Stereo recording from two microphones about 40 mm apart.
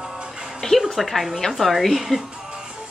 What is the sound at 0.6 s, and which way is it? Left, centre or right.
Music, centre.